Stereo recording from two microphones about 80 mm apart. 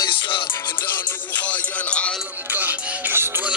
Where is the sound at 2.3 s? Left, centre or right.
Right.